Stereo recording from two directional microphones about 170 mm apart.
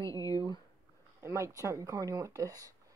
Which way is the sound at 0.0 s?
20° left (ahead or behind).